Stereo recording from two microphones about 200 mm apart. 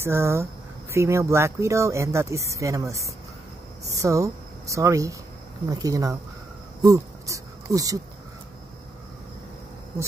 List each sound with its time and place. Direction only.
0.0 s speech: 15° right (ahead or behind)